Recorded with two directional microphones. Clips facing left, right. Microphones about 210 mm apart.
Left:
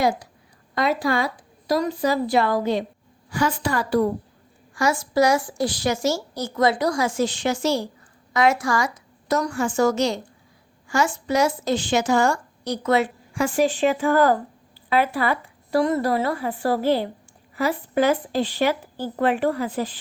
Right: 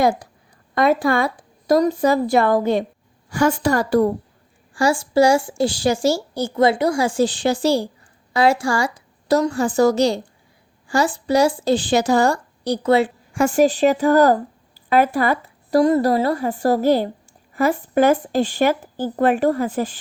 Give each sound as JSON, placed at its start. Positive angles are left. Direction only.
{"t": 0.8, "sound": "speech", "side_deg": -55}
{"t": 4.7, "sound": "a woman's voice", "side_deg": -30}
{"t": 13.3, "sound": "speech", "side_deg": -45}